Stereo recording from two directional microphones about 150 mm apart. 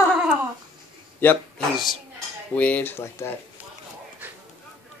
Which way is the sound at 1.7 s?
Centre (ahead or behind).